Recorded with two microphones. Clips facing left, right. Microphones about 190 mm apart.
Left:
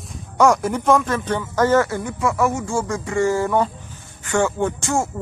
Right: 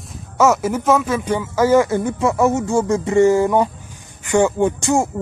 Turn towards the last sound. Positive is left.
turn(degrees=-15)  # may be behind; listen again after turning